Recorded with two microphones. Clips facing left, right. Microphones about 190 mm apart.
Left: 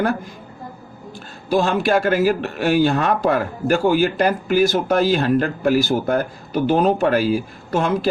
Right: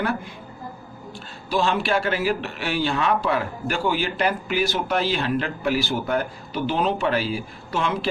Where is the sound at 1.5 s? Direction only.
45° left (ahead or behind).